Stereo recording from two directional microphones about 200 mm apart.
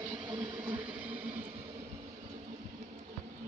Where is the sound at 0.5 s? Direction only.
10° right (ahead or behind).